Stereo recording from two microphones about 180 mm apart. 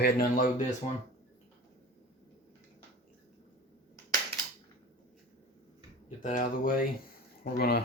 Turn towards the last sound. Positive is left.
turn(degrees=60)  # may be behind; listen again after turning